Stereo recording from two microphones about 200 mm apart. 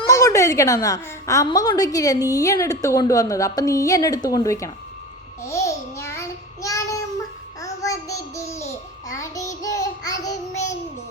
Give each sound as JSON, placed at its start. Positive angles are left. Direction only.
{"t": 0.1, "sound": "a woman's voice", "side_deg": 15}
{"t": 5.4, "sound": "child singing", "side_deg": 15}